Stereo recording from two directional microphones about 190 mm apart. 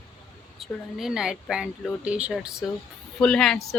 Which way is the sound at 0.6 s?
Centre (ahead or behind).